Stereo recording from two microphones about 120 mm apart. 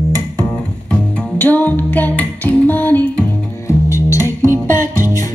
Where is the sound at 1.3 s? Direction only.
15° left (ahead or behind).